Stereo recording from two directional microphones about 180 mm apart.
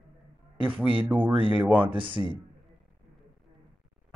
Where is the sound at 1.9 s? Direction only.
30° right (ahead or behind).